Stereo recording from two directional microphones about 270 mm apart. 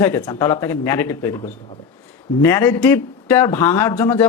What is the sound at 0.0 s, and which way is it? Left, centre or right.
A man's voice, centre.